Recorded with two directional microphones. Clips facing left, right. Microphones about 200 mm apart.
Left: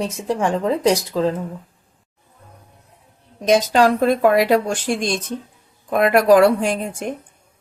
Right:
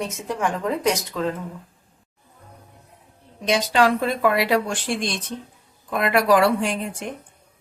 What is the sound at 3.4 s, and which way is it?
Speech, 45° left (ahead or behind).